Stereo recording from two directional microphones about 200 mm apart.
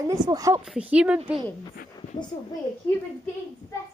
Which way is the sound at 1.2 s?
25° right (ahead or behind).